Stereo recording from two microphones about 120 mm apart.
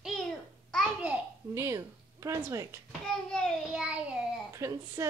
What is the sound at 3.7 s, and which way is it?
Child singing, 10° right (ahead or behind).